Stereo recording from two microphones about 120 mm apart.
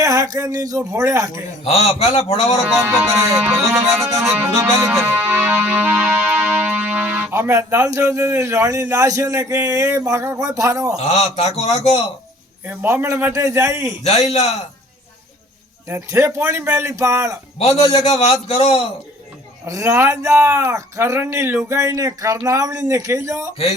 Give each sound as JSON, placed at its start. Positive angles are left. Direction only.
{"t": 0.0, "sound": "speech", "side_deg": -30}
{"t": 1.6, "sound": "a man's voice", "side_deg": 60}
{"t": 2.7, "sound": "music", "side_deg": -15}
{"t": 4.3, "sound": "speech", "side_deg": -20}
{"t": 5.0, "sound": "music", "side_deg": -15}
{"t": 11.3, "sound": "a man's voice", "side_deg": 60}
{"t": 12.6, "sound": "speech", "side_deg": -20}
{"t": 14.0, "sound": "a man's voice", "side_deg": 65}
{"t": 15.9, "sound": "speech", "side_deg": -25}
{"t": 17.6, "sound": "a man's voice", "side_deg": 60}
{"t": 19.6, "sound": "speech", "side_deg": -25}